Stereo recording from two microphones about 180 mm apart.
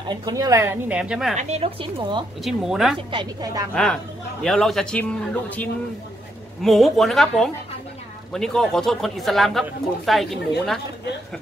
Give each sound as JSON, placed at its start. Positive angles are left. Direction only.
{"t": 0.1, "sound": "a woman's voice", "side_deg": -20}
{"t": 1.3, "sound": "a woman's voice", "side_deg": -40}
{"t": 2.4, "sound": "speech", "side_deg": 0}
{"t": 3.1, "sound": "a woman's voice", "side_deg": -25}
{"t": 3.7, "sound": "speech", "side_deg": 5}